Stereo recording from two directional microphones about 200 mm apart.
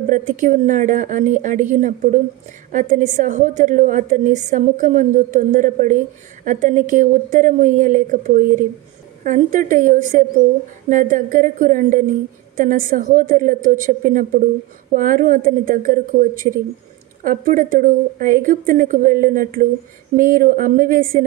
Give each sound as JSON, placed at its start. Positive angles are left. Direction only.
{"t": 0.1, "sound": "a woman's voice", "side_deg": -40}